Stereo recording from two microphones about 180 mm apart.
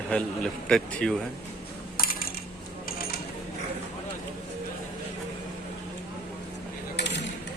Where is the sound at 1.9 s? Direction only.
55° left (ahead or behind).